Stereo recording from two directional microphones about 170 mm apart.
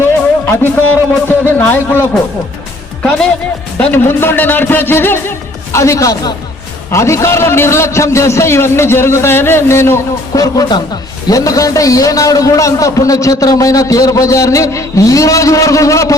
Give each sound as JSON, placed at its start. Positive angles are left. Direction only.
{"t": 0.0, "sound": "music", "side_deg": 10}
{"t": 1.5, "sound": "a man's voice", "side_deg": 10}